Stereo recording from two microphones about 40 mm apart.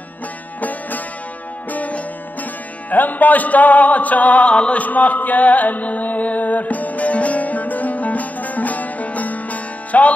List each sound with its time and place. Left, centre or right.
0.6 s music: left
4.8 s music: left